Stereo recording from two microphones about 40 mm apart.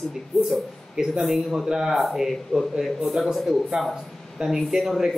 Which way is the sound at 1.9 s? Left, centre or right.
Centre.